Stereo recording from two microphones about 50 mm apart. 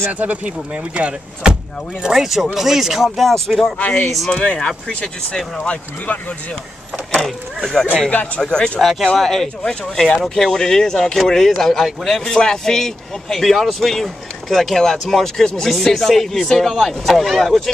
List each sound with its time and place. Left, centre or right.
0.1 s speech: right
2.1 s a man's voice: centre
3.7 s speech: left
4.1 s a man's voice: centre
4.4 s speech: centre
7.2 s speech: centre
8.4 s speech: centre
9.0 s a man's voice: centre
12.4 s a man's voice: centre